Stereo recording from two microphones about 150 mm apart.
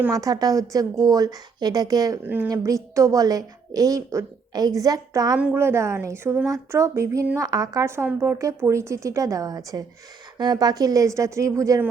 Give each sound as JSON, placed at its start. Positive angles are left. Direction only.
{"t": 0.1, "sound": "a woman's voice", "side_deg": -25}
{"t": 2.2, "sound": "a woman's voice", "side_deg": -10}
{"t": 2.5, "sound": "a woman's voice", "side_deg": -20}
{"t": 5.4, "sound": "a woman's voice", "side_deg": -10}